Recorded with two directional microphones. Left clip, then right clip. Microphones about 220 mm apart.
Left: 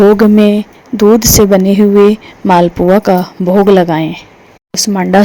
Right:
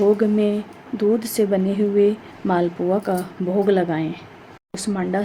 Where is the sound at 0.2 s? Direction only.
35° left (ahead or behind).